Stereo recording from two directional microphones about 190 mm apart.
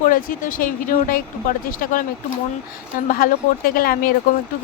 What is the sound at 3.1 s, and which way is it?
Speech, 50° left (ahead or behind).